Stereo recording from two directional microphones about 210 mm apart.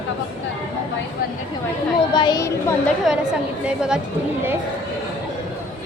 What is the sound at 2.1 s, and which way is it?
Speech, 20° left (ahead or behind).